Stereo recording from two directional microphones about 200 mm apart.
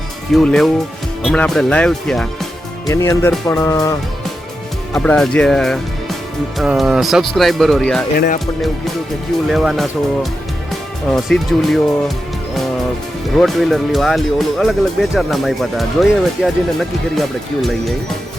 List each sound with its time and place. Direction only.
0.3 s speech: centre (ahead or behind)
2.9 s speech: 15° left (ahead or behind)
4.9 s speech: 5° left (ahead or behind)
8.1 s speech: 50° left (ahead or behind)
9.5 s speech: centre (ahead or behind)
13.3 s speech: centre (ahead or behind)